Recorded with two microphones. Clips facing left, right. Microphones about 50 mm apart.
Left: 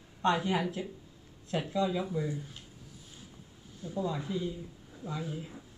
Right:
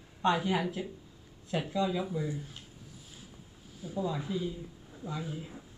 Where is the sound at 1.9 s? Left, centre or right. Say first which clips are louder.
Even; centre.